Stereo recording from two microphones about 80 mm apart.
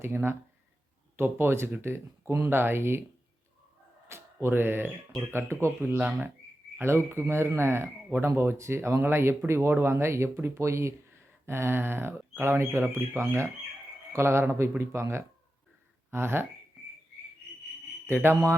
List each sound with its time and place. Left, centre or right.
0.0 s speech: right
4.1 s speech: right
5.8 s speech: right
6.7 s speech: right
18.1 s speech: right